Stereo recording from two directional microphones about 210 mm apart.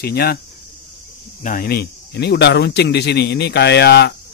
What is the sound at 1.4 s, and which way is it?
A man's voice, 40° left (ahead or behind).